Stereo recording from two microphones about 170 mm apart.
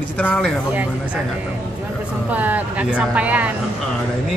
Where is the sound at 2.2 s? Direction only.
10° right (ahead or behind).